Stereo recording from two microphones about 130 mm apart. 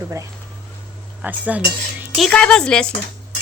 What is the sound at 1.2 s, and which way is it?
Cutlery, 10° right (ahead or behind).